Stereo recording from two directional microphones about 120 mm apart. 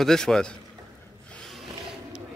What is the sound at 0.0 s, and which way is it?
Speech, 5° left (ahead or behind).